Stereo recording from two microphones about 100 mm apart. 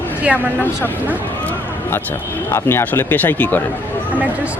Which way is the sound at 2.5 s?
25° left (ahead or behind).